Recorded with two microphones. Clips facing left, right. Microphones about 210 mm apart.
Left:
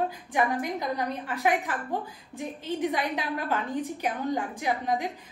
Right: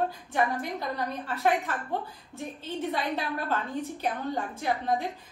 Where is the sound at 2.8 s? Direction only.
15° left (ahead or behind).